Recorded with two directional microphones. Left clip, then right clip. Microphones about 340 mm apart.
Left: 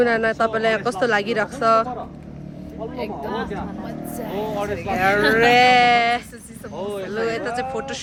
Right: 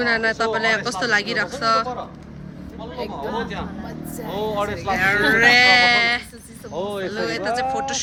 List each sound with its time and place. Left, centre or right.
0.0 s speech: centre
4.3 s speech: centre
6.7 s speech: right
7.1 s speech: centre